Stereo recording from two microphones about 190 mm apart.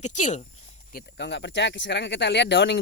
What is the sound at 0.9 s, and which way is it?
Speech, 65° left (ahead or behind).